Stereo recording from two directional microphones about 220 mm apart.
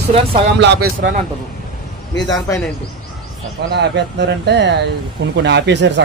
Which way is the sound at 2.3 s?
15° left (ahead or behind).